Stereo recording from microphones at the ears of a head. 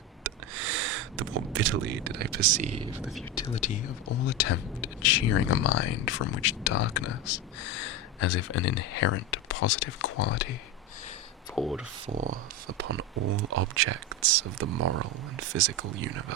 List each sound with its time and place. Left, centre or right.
0.2 s a sound: right
3.3 s speech: left
12.2 s speech: right